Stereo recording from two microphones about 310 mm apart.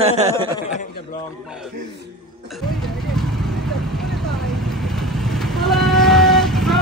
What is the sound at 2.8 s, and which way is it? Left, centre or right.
Vehicle, centre.